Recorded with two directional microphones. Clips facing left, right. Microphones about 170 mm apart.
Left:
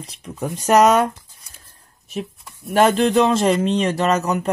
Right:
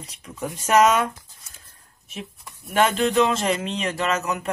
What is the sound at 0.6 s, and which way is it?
Speech, 40° left (ahead or behind).